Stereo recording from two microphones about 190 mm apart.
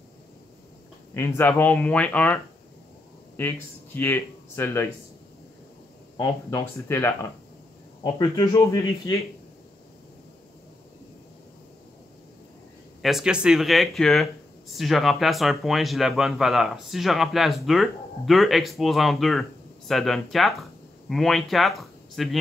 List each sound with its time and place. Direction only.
1.1 s speech: 15° left (ahead or behind)
6.1 s speech: 20° left (ahead or behind)
6.9 s speech: 10° left (ahead or behind)
13.0 s speech: 5° right (ahead or behind)